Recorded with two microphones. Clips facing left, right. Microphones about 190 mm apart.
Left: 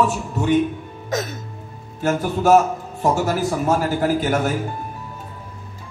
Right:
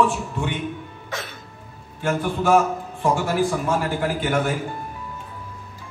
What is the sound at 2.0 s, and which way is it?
A man's voice, 40° left (ahead or behind).